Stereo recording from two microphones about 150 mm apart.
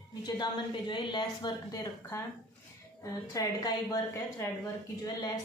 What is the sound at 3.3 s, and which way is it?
Speech, 25° left (ahead or behind).